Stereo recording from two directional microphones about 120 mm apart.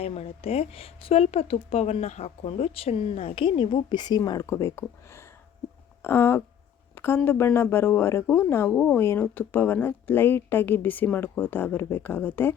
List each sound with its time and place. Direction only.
0.0 s a woman's voice: 55° left (ahead or behind); by 12.5 s 15° left (ahead or behind)